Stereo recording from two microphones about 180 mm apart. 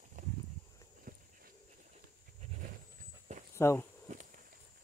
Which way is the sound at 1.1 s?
50° right (ahead or behind).